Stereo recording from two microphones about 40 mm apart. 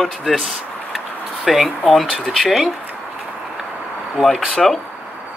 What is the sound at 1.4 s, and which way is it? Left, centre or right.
Speech, centre.